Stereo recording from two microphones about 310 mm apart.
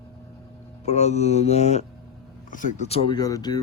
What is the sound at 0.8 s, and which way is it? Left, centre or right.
Speech, left.